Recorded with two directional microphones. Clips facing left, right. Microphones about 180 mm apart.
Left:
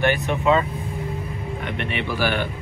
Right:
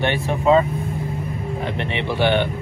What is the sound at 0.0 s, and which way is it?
Speech, 30° right (ahead or behind).